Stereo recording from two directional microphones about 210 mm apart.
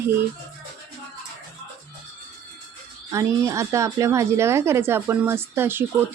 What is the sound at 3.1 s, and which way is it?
A woman's voice, 15° right (ahead or behind).